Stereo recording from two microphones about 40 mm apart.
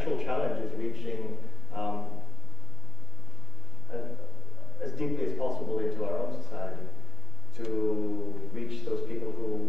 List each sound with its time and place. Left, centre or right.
0.0 s a man's voice: centre
3.9 s a sound: centre
4.8 s a man's voice: centre